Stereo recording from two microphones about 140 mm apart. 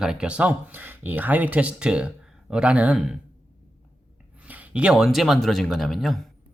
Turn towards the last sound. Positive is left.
turn(degrees=0)  # may be behind; listen again after turning